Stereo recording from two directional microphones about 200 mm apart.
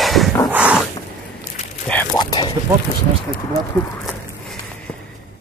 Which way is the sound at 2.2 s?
20° left (ahead or behind).